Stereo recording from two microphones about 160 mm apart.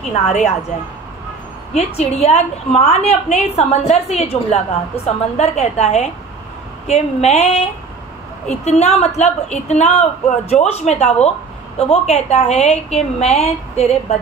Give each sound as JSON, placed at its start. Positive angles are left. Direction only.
{"t": 0.1, "sound": "speech", "side_deg": 45}
{"t": 2.0, "sound": "a woman's voice", "side_deg": 40}
{"t": 8.6, "sound": "a woman's voice", "side_deg": 45}